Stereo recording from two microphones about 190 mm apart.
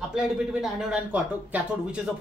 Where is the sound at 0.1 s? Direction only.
5° right (ahead or behind).